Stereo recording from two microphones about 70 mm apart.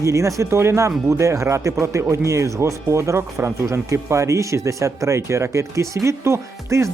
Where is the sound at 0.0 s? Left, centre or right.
Right.